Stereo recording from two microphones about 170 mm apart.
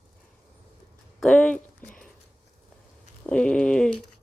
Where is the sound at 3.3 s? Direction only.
5° left (ahead or behind).